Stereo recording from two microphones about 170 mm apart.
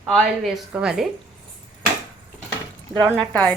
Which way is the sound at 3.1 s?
5° left (ahead or behind).